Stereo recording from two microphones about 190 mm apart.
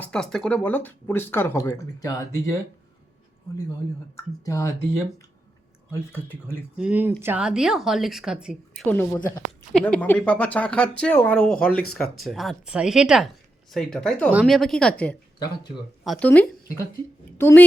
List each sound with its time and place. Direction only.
0.0 s speech: 5° left (ahead or behind)
4.4 s speech: 15° left (ahead or behind)
5.9 s speech: 10° left (ahead or behind)
6.7 s a woman's voice: 5° right (ahead or behind)
8.9 s speech: 10° left (ahead or behind)
11.7 s speech: 50° left (ahead or behind)
11.9 s a woman's voice: centre (ahead or behind)